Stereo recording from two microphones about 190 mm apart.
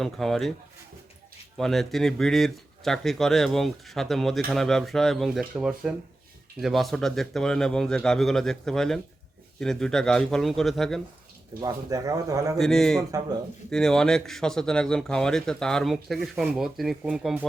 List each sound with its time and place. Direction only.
0.0 s speech: centre (ahead or behind)
1.5 s speech: centre (ahead or behind)
11.6 s speech: 20° right (ahead or behind)
12.5 s speech: 5° left (ahead or behind)
13.1 s speech: 20° right (ahead or behind)
13.7 s speech: 5° left (ahead or behind)